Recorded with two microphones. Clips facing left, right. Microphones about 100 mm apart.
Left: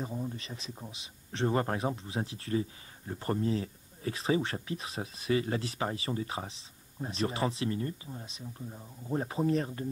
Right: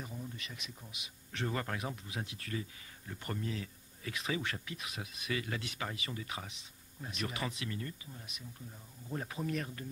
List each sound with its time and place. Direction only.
0.0 s speech: 35° left (ahead or behind)